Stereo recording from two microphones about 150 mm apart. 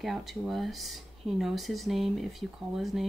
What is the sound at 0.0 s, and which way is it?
Speech, centre (ahead or behind).